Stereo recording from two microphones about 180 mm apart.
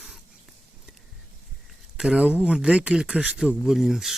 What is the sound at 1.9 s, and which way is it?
Speech, 5° right (ahead or behind).